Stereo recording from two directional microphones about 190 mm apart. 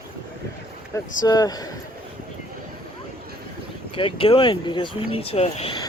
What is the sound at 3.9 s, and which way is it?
Speech, 30° left (ahead or behind).